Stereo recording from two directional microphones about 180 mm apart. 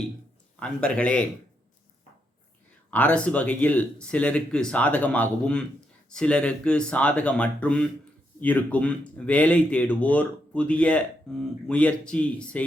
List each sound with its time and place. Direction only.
0.6 s speech: 5° left (ahead or behind)
2.9 s speech: 5° left (ahead or behind)